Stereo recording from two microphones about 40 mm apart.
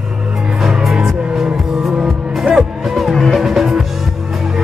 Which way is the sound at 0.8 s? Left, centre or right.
Centre.